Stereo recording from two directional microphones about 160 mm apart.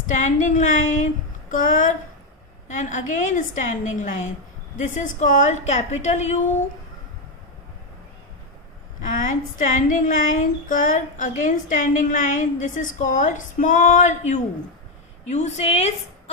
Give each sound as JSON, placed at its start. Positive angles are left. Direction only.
{"t": 0.1, "sound": "a woman's voice", "side_deg": 50}
{"t": 9.0, "sound": "a woman's voice", "side_deg": 55}